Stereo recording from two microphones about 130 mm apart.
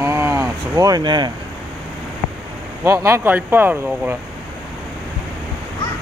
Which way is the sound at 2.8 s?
20° right (ahead or behind).